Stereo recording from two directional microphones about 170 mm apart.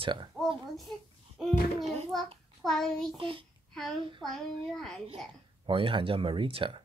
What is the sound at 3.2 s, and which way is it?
Speech, 30° right (ahead or behind).